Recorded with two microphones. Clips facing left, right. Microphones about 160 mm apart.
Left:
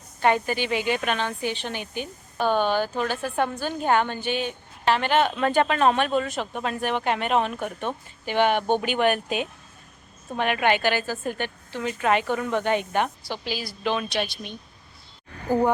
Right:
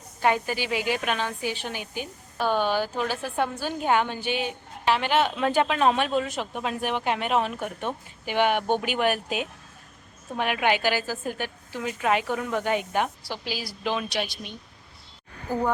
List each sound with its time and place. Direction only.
0.2 s a woman's voice: 5° right (ahead or behind)